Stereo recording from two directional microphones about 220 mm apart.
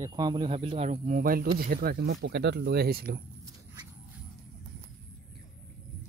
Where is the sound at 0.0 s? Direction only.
20° right (ahead or behind); by 3.2 s 45° right (ahead or behind).